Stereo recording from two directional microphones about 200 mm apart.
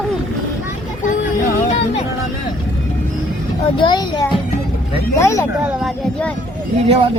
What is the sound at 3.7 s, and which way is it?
A child's voice, 20° left (ahead or behind).